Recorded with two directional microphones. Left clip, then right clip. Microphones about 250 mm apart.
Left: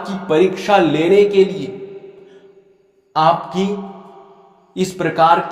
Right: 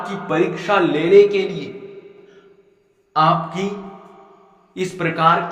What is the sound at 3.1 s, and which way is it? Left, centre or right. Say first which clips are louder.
Speech: left 2 dB; left.